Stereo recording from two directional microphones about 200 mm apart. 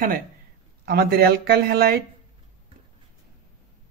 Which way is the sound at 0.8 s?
50° right (ahead or behind).